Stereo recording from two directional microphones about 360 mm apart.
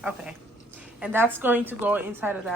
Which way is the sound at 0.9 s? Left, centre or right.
Centre.